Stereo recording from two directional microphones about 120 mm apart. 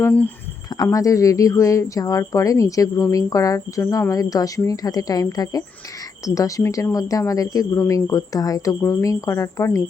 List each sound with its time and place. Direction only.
0.0 s speech: 10° left (ahead or behind)
0.7 s speech: 30° left (ahead or behind)